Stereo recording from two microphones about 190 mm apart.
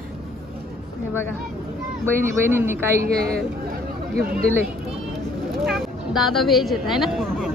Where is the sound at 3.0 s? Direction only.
50° right (ahead or behind).